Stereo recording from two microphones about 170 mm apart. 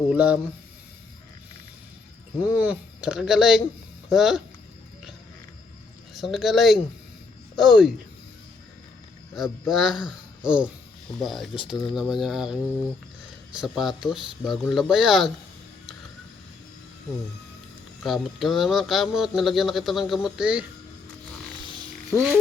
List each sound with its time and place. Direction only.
0.1 s speech: 5° right (ahead or behind)
2.6 s speech: 5° right (ahead or behind)
6.1 s speech: centre (ahead or behind)
9.3 s speech: centre (ahead or behind)
13.6 s speech: 5° right (ahead or behind)
18.0 s speech: centre (ahead or behind)
21.6 s a sound: 30° right (ahead or behind)